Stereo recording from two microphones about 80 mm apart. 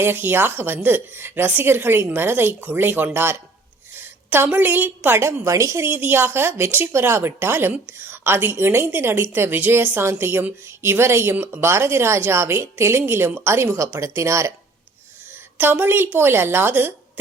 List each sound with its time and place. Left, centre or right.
0.0 s a woman's voice: right
5.5 s speech: right
5.9 s a woman's voice: right
15.5 s a woman's voice: right